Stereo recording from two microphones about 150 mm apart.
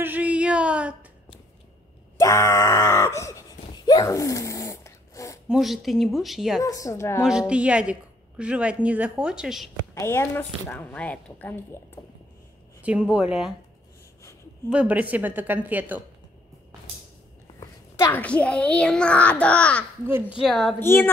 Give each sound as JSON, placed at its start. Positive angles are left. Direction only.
{"t": 0.0, "sound": "a sound", "side_deg": -10}
{"t": 2.1, "sound": "groan", "side_deg": 20}
{"t": 5.5, "sound": "speech", "side_deg": 0}
{"t": 6.6, "sound": "a woman's voice", "side_deg": 20}
{"t": 7.2, "sound": "speech", "side_deg": -5}
{"t": 9.9, "sound": "a woman's voice", "side_deg": 15}
{"t": 12.8, "sound": "speech", "side_deg": -5}
{"t": 14.7, "sound": "speech", "side_deg": -10}
{"t": 17.6, "sound": "a child's voice", "side_deg": 20}
{"t": 20.1, "sound": "speech", "side_deg": -15}
{"t": 20.4, "sound": "speech", "side_deg": 0}
{"t": 20.8, "sound": "a woman's voice", "side_deg": 15}